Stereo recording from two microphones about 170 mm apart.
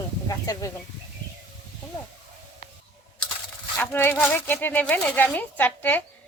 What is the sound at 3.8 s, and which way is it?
Speech, 10° left (ahead or behind).